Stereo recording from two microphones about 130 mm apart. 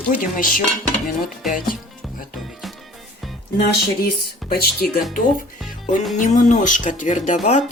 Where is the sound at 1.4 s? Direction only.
Centre (ahead or behind).